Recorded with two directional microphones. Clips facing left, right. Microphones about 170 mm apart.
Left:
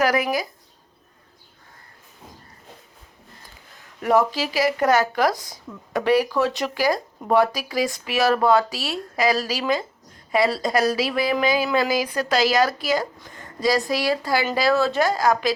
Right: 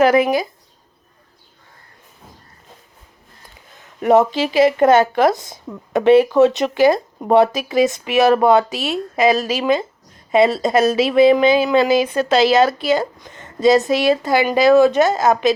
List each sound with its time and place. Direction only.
0.0 s speech: 25° right (ahead or behind)
4.0 s speech: 20° right (ahead or behind)